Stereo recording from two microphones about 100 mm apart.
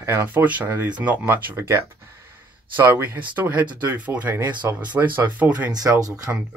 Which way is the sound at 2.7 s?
20° right (ahead or behind).